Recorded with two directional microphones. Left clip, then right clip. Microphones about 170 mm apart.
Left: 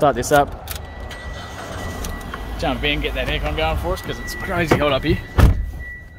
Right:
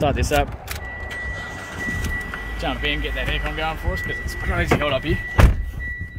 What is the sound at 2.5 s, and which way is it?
Speech, 25° left (ahead or behind).